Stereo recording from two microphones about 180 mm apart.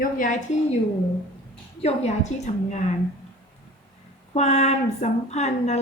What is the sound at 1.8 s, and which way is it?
Speech, 35° left (ahead or behind).